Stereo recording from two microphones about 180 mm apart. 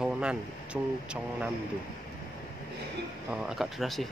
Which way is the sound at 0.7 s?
5° right (ahead or behind).